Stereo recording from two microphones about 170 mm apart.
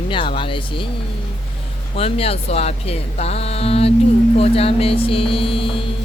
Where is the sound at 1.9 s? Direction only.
35° left (ahead or behind).